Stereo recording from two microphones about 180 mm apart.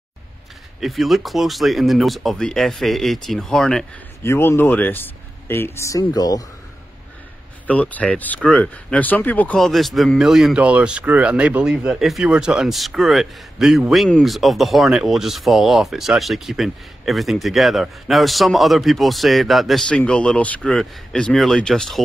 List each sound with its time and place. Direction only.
0.7 s speech: centre (ahead or behind)
4.2 s speech: 15° left (ahead or behind)
7.6 s speech: 10° left (ahead or behind)